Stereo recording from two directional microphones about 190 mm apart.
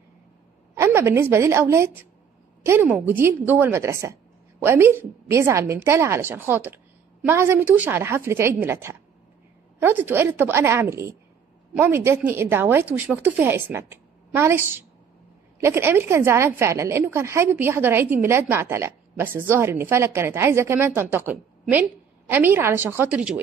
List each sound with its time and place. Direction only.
0.7 s a woman's voice: 15° right (ahead or behind)